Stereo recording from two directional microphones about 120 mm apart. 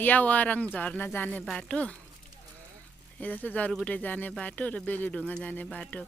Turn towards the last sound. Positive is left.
turn(degrees=10)  # may be behind; listen again after turning